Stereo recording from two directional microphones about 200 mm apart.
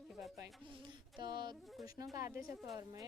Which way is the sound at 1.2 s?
20° right (ahead or behind).